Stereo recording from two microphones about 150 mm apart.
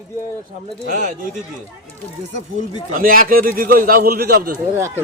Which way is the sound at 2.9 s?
70° right (ahead or behind).